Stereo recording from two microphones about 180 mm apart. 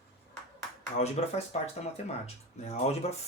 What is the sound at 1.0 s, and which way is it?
Speech, 35° left (ahead or behind).